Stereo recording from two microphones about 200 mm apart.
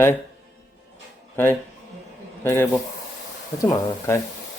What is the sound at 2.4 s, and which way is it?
Speech, 10° left (ahead or behind).